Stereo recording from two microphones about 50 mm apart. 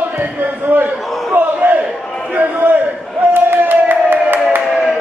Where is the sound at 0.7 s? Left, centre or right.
Right.